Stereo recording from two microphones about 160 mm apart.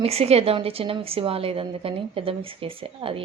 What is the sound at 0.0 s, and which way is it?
A woman's voice, 40° right (ahead or behind).